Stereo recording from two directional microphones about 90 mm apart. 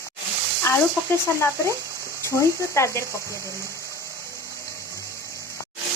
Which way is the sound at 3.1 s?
35° right (ahead or behind).